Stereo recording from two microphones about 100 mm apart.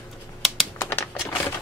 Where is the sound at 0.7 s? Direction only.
20° left (ahead or behind).